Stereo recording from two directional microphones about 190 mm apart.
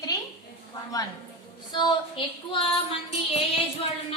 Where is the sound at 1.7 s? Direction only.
25° left (ahead or behind).